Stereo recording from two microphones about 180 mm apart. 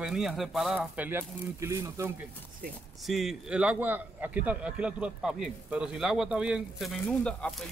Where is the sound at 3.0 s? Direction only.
Centre (ahead or behind).